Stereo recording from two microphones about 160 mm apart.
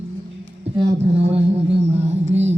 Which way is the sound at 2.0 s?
45° right (ahead or behind).